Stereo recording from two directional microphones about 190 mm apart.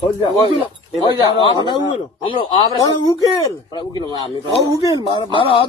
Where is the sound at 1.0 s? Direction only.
20° left (ahead or behind).